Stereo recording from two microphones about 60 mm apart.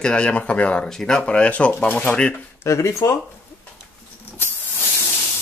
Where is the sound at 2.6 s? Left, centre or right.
Left.